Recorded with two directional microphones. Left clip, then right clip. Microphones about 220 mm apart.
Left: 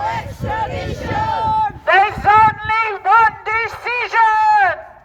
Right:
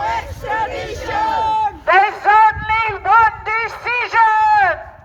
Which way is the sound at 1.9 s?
30° left (ahead or behind).